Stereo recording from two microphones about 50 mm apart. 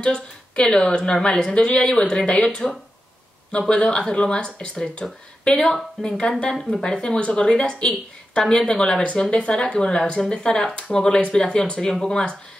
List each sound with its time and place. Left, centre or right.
0.0 s a woman's voice: centre
9.0 s a woman's voice: left